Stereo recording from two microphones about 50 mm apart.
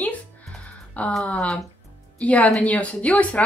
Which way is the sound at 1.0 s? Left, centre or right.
Left.